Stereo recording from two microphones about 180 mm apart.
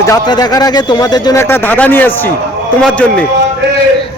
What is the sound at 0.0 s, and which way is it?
A man's voice, 20° left (ahead or behind).